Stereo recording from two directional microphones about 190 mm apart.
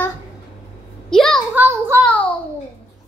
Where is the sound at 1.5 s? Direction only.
15° right (ahead or behind).